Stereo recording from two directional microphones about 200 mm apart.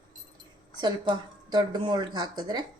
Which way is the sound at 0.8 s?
20° right (ahead or behind).